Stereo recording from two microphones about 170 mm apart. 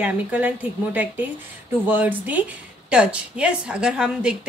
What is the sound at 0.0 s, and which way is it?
A woman's voice, 10° right (ahead or behind).